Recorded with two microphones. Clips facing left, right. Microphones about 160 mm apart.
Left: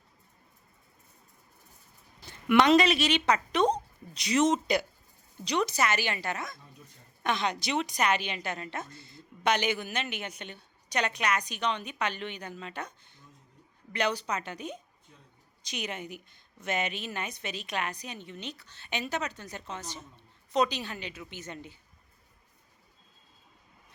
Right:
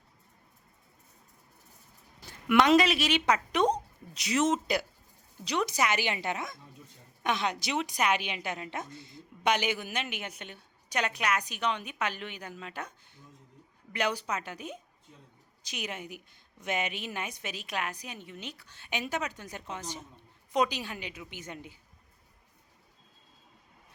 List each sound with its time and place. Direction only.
2.2 s a woman's voice: 5° right (ahead or behind)